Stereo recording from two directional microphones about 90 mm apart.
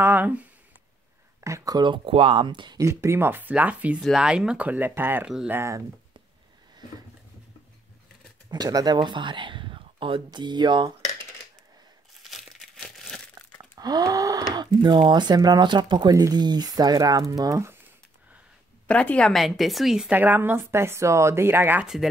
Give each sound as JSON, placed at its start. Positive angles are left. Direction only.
{"t": 0.0, "sound": "speech", "side_deg": -20}
{"t": 1.4, "sound": "speech", "side_deg": -35}
{"t": 1.8, "sound": "speech", "side_deg": -75}
{"t": 2.8, "sound": "speech", "side_deg": -30}
{"t": 8.5, "sound": "speech", "side_deg": -45}
{"t": 12.2, "sound": "crumpling", "side_deg": 0}
{"t": 13.6, "sound": "a sound", "side_deg": -45}
{"t": 15.0, "sound": "speech", "side_deg": -55}
{"t": 16.1, "sound": "speech", "side_deg": -45}
{"t": 18.9, "sound": "speech", "side_deg": 15}
{"t": 19.3, "sound": "speech", "side_deg": 0}
{"t": 20.1, "sound": "speech", "side_deg": -20}
{"t": 21.8, "sound": "speech", "side_deg": -5}